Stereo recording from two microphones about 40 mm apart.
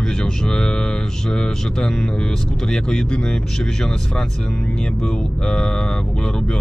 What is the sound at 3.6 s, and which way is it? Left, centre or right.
Speech, centre.